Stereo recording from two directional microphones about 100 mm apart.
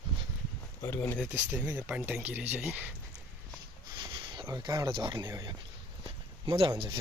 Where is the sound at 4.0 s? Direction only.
50° right (ahead or behind).